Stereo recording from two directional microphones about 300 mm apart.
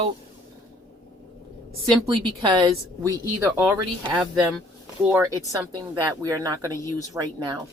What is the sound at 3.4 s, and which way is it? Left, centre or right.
A woman's voice, centre.